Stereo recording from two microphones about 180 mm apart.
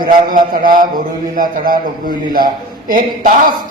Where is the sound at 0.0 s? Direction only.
50° right (ahead or behind).